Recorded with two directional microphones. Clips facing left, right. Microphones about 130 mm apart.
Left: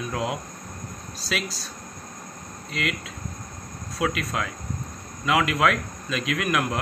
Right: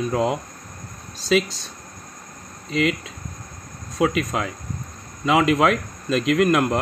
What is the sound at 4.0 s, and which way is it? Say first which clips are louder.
Speech: right 5 dB; 20° right (ahead or behind).